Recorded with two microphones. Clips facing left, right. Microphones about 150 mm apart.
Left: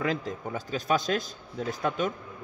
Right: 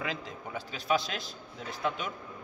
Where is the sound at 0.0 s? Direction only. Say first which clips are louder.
Left 7 dB; 45° left (ahead or behind).